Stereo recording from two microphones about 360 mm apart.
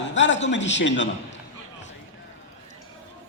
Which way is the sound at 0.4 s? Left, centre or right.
Left.